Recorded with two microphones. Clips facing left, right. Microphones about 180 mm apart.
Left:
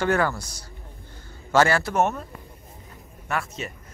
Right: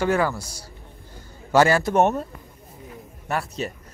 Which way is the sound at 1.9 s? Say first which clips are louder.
Right 4 dB; 30° right (ahead or behind).